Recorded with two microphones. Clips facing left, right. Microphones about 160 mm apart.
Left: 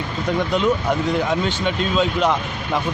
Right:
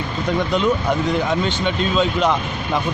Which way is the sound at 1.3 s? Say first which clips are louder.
Right 1 dB; 5° left (ahead or behind).